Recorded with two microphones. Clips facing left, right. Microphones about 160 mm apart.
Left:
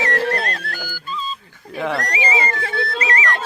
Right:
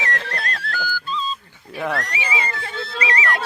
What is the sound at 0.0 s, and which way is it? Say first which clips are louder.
Music: left 7 dB; 50° left (ahead or behind).